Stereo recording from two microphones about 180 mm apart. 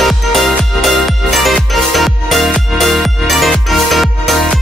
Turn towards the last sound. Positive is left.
turn(degrees=0)  # may be behind; listen again after turning